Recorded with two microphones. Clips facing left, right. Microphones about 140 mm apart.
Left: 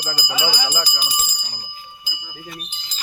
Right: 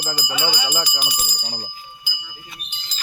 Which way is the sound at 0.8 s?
30° left (ahead or behind).